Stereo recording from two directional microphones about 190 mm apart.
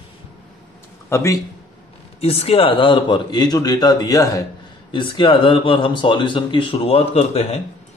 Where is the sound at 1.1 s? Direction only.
15° left (ahead or behind).